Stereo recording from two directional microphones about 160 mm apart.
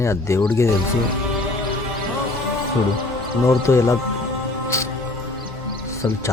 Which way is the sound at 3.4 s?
15° left (ahead or behind).